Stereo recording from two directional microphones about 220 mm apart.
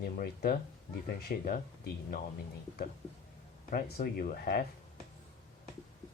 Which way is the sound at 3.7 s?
40° left (ahead or behind).